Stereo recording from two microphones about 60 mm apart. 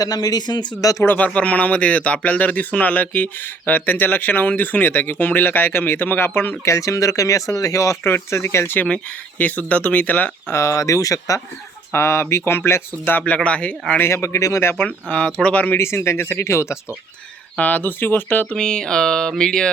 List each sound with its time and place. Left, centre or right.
0.0 s speech: left
1.0 s speech: left
6.7 s speech: left
8.0 s speech: left
9.4 s speech: left
10.5 s speech: left
11.9 s speech: left
13.1 s speech: left
14.0 s speech: left
15.4 s speech: left
15.8 s speech: left
17.6 s speech: left
18.5 s a sound: centre